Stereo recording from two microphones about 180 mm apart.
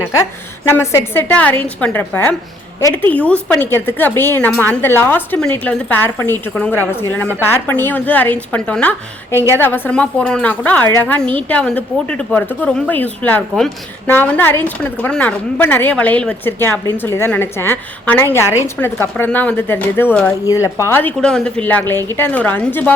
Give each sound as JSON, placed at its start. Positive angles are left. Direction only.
{"t": 0.2, "sound": "a woman's voice", "side_deg": 15}